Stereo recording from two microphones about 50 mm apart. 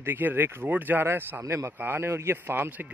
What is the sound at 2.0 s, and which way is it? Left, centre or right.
Speech, right.